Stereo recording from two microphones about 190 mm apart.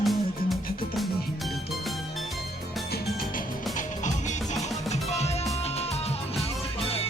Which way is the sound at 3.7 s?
40° left (ahead or behind).